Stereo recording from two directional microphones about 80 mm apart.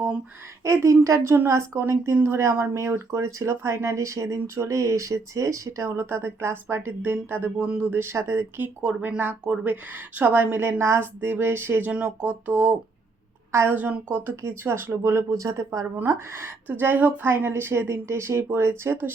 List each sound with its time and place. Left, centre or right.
0.6 s speech: right
6.0 s a woman's voice: right
8.8 s a woman's voice: centre
11.9 s a woman's voice: centre
13.5 s a woman's voice: right
13.7 s a woman's voice: right